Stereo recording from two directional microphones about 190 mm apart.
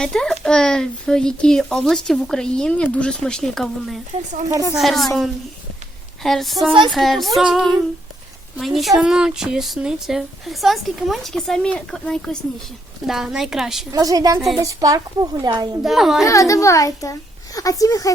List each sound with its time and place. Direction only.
0.0 s speech: 5° left (ahead or behind)
13.9 s a woman's voice: 20° right (ahead or behind)
15.8 s speech: centre (ahead or behind)
16.2 s a child's voice: 15° left (ahead or behind)